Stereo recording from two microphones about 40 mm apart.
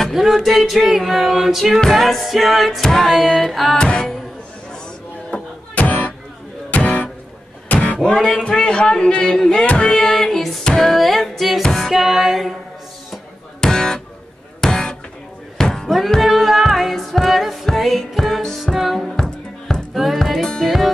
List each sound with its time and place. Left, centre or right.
0.1 s a capella: centre
2.8 s music: centre
3.1 s a capella: centre
3.7 s music: left
5.3 s music: left
9.9 s music: centre
11.9 s a capella: centre
13.6 s music: centre
15.5 s a sound: centre
16.2 s music: centre
17.7 s a capella: centre
18.6 s music: centre
19.1 s music: centre